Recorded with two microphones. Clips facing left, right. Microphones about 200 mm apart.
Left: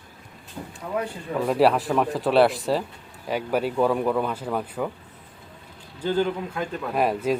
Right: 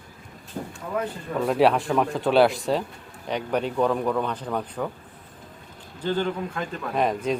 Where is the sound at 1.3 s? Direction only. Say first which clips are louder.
Even; 5° left (ahead or behind).